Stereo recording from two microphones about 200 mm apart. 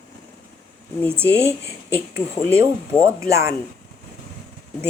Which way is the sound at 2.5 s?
15° right (ahead or behind).